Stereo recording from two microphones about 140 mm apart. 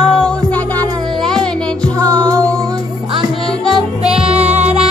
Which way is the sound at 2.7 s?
30° right (ahead or behind).